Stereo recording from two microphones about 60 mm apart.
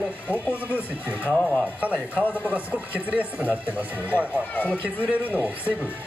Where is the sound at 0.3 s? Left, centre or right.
Right.